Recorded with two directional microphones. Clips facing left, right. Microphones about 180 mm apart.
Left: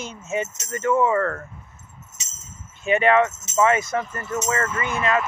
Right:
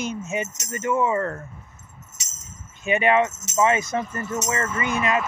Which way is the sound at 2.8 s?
15° right (ahead or behind).